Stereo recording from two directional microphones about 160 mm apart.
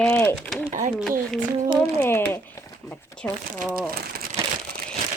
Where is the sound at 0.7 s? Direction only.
55° right (ahead or behind).